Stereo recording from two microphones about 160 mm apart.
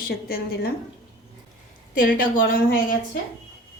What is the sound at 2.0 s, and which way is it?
Speech, 60° left (ahead or behind).